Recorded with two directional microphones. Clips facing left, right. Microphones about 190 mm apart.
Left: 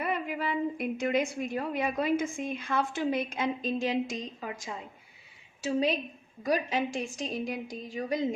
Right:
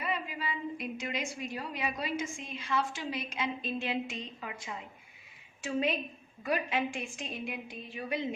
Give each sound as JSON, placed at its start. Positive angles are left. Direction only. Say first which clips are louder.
{"t": 0.0, "sound": "a woman's voice", "louder": "left 5 dB", "side_deg": 55}